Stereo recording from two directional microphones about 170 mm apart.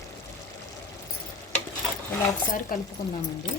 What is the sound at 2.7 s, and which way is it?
Speech, 55° left (ahead or behind).